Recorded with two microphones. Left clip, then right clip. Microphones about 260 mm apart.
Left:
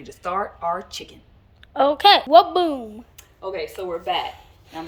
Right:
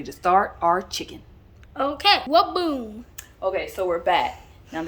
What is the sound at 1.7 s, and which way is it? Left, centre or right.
A woman's voice, centre.